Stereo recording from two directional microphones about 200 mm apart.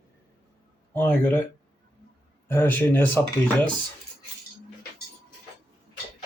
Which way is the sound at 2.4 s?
10° left (ahead or behind).